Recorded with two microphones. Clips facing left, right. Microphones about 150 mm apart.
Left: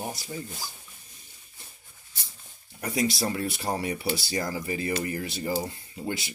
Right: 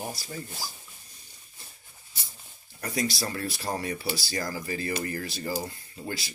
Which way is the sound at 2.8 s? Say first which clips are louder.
Left 3 dB; 25° left (ahead or behind).